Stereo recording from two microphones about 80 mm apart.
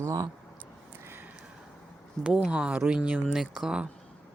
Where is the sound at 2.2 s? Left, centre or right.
Centre.